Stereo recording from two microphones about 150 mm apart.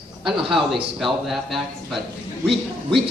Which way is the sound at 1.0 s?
Centre (ahead or behind).